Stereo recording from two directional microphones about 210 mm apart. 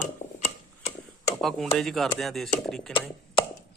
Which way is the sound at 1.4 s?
Centre (ahead or behind).